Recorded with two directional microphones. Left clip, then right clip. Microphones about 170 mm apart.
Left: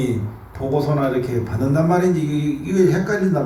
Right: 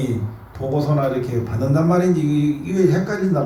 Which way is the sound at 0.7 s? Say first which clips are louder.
Left 1 dB; 20° left (ahead or behind).